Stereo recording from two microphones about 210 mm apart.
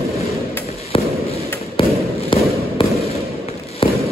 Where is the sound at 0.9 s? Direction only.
25° left (ahead or behind).